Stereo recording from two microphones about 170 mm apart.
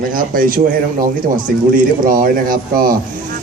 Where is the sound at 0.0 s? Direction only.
55° right (ahead or behind).